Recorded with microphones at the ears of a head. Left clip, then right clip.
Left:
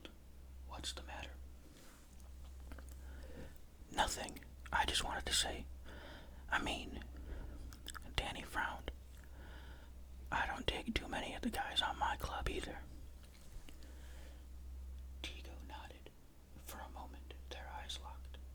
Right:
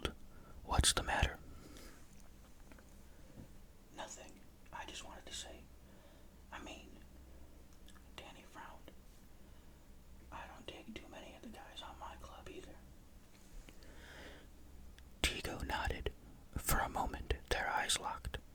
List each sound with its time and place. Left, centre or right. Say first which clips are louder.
0.7 s whispering: right 13 dB; right
3.9 s whispering: left 12 dB; left
10.2 s whispering: left 12 dB; left
14.0 s a sound: right 11 dB; right
15.2 s whispering: right 12 dB; right